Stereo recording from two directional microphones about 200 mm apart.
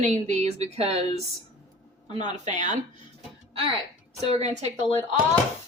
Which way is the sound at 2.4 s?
35° right (ahead or behind).